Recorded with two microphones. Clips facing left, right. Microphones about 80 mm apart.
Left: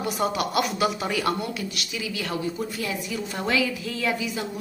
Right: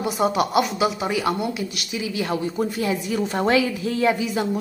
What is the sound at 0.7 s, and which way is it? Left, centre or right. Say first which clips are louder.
Speech: right 2 dB; centre.